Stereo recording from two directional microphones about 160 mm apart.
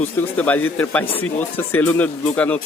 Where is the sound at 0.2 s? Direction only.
10° left (ahead or behind).